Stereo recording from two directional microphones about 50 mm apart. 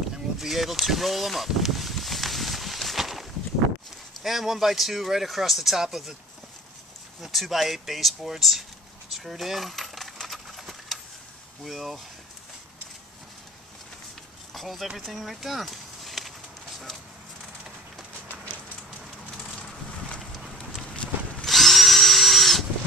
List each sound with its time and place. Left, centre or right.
0.4 s a sound: centre
4.2 s speech: centre
7.2 s speech: centre
9.1 s coin: centre
11.6 s speech: centre
14.5 s speech: centre
15.0 s a sound: centre
20.9 s walk: left
21.5 s drill: centre